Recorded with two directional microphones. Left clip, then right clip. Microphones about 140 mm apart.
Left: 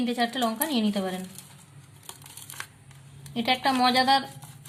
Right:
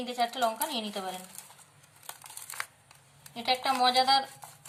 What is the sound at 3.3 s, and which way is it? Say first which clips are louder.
Speech: left 4 dB; 30° left (ahead or behind).